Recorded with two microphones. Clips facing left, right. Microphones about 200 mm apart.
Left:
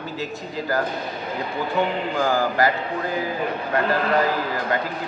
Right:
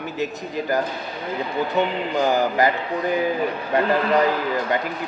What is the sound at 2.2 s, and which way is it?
Speech, 20° right (ahead or behind).